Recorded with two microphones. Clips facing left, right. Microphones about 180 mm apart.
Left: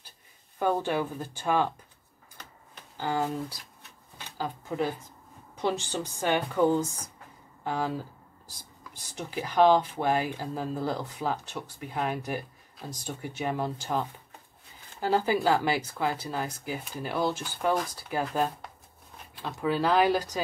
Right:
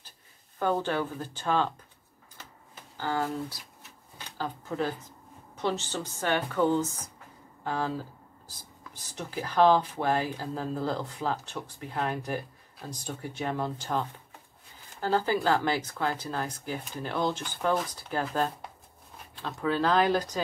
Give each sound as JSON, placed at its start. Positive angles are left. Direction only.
{"t": 0.6, "sound": "speech", "side_deg": 10}
{"t": 3.0, "sound": "speech", "side_deg": 15}
{"t": 4.4, "sound": "speech", "side_deg": 10}